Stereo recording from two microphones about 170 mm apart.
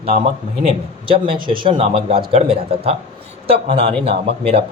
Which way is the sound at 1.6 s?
30° right (ahead or behind).